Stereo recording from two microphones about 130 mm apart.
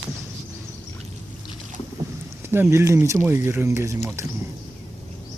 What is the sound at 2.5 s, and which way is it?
Speech, 20° right (ahead or behind).